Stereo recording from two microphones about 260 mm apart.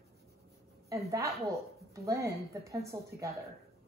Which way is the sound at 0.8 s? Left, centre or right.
Centre.